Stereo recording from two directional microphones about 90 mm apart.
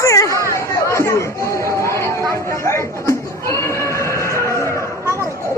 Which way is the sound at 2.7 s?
30° left (ahead or behind).